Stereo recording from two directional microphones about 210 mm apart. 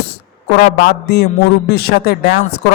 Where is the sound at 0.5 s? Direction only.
50° left (ahead or behind).